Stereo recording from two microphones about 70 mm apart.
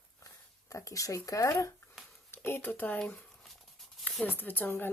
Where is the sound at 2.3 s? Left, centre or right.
Left.